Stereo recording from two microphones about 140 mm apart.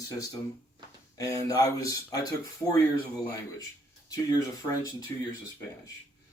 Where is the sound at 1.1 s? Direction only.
25° left (ahead or behind).